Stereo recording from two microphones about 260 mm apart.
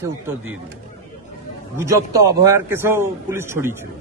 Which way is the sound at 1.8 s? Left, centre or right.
Centre.